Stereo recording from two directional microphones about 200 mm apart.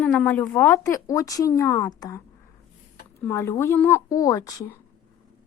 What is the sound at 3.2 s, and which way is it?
Speech, 15° left (ahead or behind).